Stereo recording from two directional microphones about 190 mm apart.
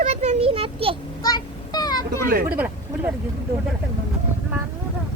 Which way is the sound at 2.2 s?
50° right (ahead or behind).